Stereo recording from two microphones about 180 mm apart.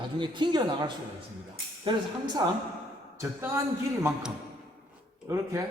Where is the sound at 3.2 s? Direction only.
15° right (ahead or behind).